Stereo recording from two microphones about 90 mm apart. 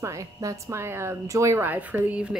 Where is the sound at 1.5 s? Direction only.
20° right (ahead or behind).